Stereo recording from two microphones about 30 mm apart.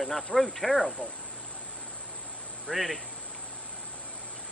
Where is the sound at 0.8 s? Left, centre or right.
Left.